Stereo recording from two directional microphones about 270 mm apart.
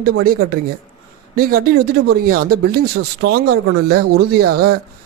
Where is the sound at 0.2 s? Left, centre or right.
Right.